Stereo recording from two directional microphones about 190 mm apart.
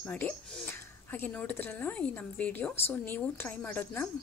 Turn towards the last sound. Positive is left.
turn(degrees=10)  # may be behind; listen again after turning